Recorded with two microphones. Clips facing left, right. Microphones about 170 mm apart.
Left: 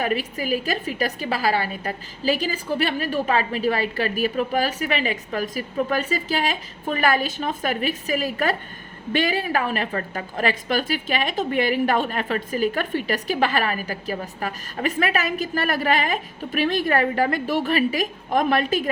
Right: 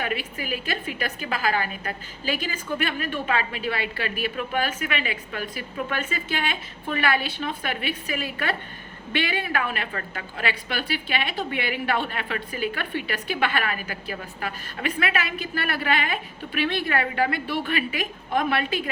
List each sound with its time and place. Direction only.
0.0 s a woman's voice: 40° left (ahead or behind)